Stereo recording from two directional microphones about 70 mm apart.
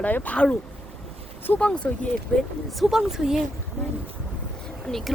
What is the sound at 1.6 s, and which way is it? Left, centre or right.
Speech, centre.